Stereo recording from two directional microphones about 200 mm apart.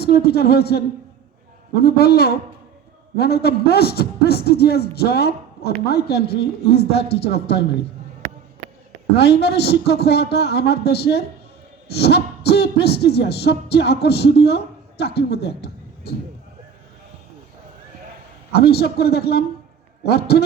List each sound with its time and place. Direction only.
0.0 s a man's voice: 50° left (ahead or behind)
9.1 s a sound: 55° left (ahead or behind)
18.5 s a man's voice: 55° left (ahead or behind)